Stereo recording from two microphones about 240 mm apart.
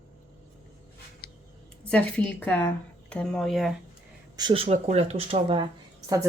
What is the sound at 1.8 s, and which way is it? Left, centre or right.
Speech, centre.